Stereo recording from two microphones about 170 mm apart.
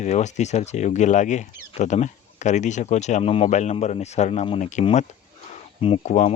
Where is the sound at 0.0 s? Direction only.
45° left (ahead or behind).